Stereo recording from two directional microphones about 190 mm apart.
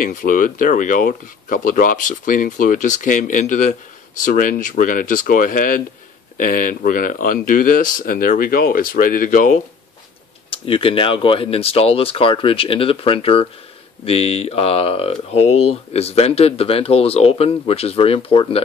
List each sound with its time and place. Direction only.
0.0 s speech: 45° left (ahead or behind)
10.5 s speech: 30° left (ahead or behind)